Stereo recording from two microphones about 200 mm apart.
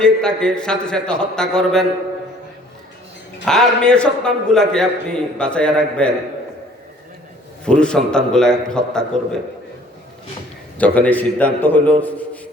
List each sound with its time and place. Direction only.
0.0 s a man's voice: 5° left (ahead or behind)
3.4 s a man's voice: centre (ahead or behind)
7.6 s a man's voice: 5° left (ahead or behind)
10.8 s a man's voice: 5° left (ahead or behind)